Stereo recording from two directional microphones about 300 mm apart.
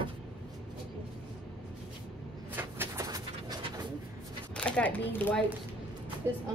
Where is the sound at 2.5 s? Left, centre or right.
Centre.